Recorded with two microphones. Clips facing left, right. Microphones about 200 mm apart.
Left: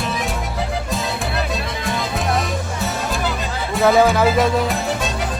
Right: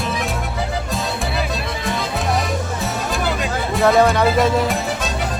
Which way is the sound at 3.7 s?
Centre (ahead or behind).